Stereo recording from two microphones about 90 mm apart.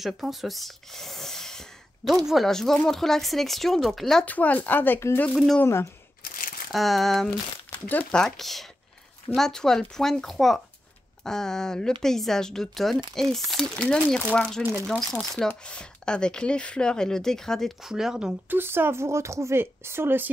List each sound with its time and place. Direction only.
0.0 s speech: centre (ahead or behind)
4.3 s speech: 15° left (ahead or behind)
6.7 s speech: centre (ahead or behind)
18.5 s speech: 25° right (ahead or behind)